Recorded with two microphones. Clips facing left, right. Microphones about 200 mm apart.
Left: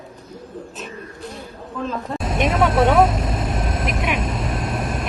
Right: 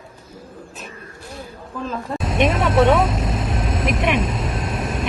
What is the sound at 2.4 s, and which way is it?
Speech, 25° right (ahead or behind).